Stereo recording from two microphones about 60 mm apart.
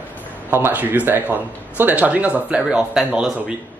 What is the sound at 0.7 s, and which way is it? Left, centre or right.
A man's voice, right.